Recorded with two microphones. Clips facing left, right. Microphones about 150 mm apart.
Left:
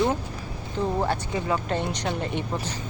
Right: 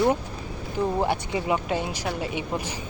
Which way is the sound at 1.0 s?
15° right (ahead or behind).